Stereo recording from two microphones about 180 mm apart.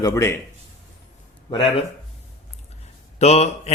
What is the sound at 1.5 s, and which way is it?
Speech, 30° left (ahead or behind).